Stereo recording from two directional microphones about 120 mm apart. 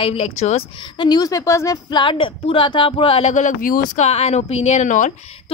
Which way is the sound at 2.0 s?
45° left (ahead or behind).